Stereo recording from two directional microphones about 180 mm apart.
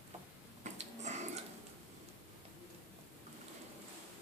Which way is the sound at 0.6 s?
40° right (ahead or behind).